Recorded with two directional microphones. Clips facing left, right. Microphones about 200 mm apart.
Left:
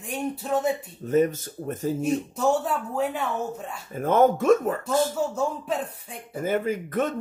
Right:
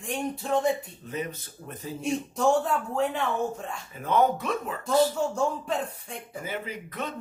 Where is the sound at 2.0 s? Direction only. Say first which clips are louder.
Right 1 dB; 5° left (ahead or behind).